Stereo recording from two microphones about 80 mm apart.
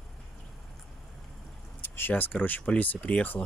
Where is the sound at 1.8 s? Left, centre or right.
Left.